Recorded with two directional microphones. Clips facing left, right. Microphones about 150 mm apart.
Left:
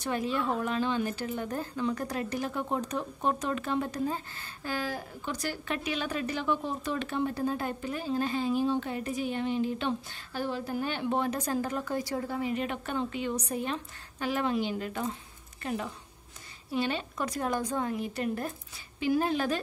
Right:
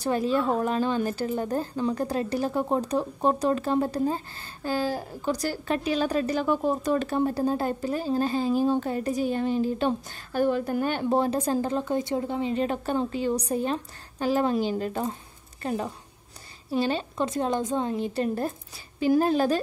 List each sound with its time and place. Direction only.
0.0 s a woman's voice: 35° right (ahead or behind)